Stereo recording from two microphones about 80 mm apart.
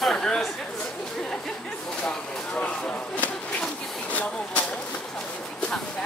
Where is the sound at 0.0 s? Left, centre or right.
Centre.